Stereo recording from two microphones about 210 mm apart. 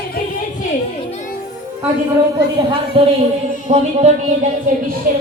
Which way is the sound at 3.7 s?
30° right (ahead or behind).